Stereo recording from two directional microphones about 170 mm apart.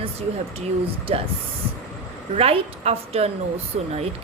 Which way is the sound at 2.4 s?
35° right (ahead or behind).